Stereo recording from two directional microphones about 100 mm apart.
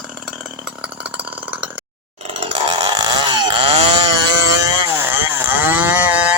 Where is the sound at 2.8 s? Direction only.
45° right (ahead or behind).